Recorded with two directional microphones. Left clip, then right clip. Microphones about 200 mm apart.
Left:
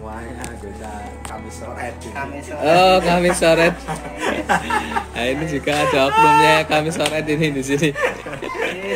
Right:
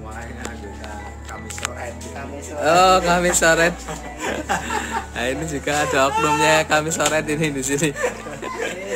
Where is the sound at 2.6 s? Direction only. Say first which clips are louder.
Left 1 dB; centre (ahead or behind).